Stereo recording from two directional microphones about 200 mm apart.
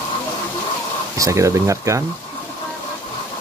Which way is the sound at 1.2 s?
15° right (ahead or behind).